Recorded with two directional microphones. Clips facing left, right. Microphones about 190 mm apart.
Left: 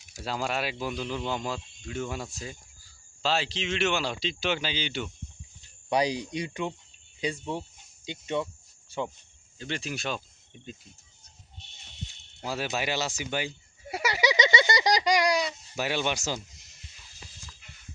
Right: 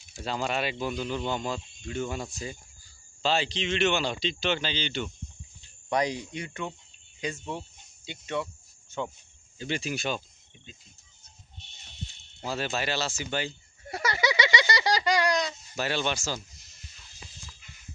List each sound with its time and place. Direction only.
0.2 s speech: 5° left (ahead or behind); by 8.4 s 20° left (ahead or behind)
9.6 s speech: 5° right (ahead or behind)
12.4 s a sound: 5° left (ahead or behind)